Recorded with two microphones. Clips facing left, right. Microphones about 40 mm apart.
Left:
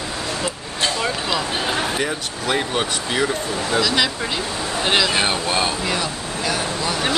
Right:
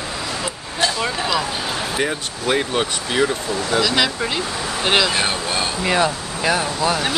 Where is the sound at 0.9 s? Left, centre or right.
Centre.